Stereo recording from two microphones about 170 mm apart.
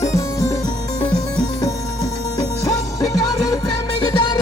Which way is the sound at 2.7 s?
20° left (ahead or behind).